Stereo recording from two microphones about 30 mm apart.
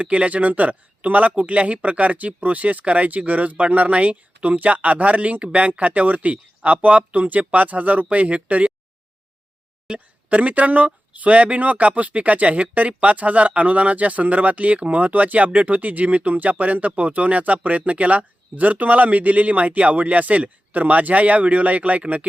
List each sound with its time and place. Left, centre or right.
0.0 s speech: right
9.9 s speech: right
10.2 s speech: right